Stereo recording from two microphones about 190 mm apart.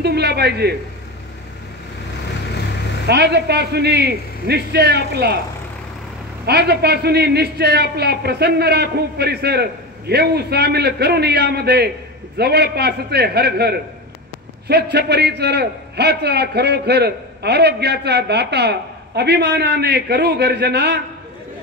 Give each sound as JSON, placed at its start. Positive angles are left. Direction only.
{"t": 0.0, "sound": "a man's voice", "side_deg": -60}
{"t": 3.1, "sound": "a man's voice", "side_deg": -60}
{"t": 6.4, "sound": "a man's voice", "side_deg": -60}